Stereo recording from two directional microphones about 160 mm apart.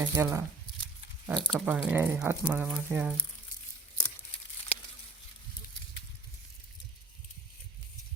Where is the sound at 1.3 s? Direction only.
Centre (ahead or behind).